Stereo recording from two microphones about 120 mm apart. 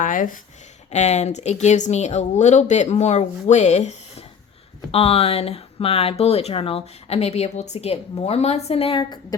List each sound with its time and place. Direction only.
0.0 s speech: 90° left
0.9 s speech: 70° left (ahead or behind)
4.9 s speech: 55° left (ahead or behind)